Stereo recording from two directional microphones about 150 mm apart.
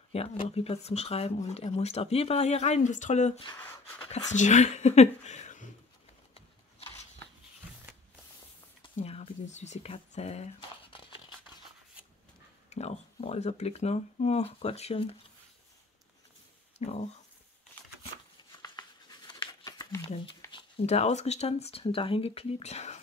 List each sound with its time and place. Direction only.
0.1 s speech: 45° left (ahead or behind)
3.5 s speech: 15° left (ahead or behind)
4.1 s speech: 50° left (ahead or behind)
6.3 s a sound: 40° left (ahead or behind)
8.9 s speech: 40° left (ahead or behind)
9.9 s a sound: 45° left (ahead or behind)
12.6 s speech: 45° left (ahead or behind)
16.7 s speech: 45° left (ahead or behind)
18.6 s a sound: 25° left (ahead or behind)
20.5 s speech: 40° left (ahead or behind)